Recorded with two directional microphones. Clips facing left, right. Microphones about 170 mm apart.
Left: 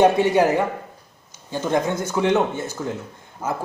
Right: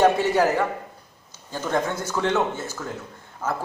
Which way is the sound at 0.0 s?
20° left (ahead or behind).